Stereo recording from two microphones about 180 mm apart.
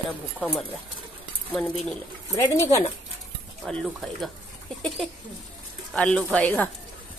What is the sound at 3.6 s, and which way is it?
Speech, centre (ahead or behind).